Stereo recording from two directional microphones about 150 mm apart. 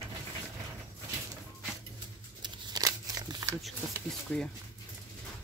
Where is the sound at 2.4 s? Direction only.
25° right (ahead or behind).